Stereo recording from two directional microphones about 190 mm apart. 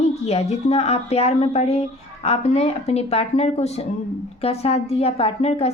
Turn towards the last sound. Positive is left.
turn(degrees=30)  # may be behind; listen again after turning